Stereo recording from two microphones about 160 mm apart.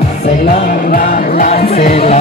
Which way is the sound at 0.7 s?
60° left (ahead or behind).